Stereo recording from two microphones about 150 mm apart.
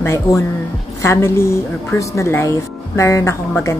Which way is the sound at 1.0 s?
15° left (ahead or behind).